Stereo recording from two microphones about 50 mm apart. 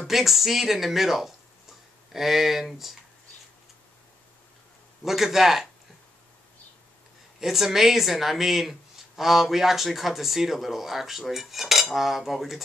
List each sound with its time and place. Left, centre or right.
0.0 s speech: centre
5.0 s speech: centre
7.3 s speech: centre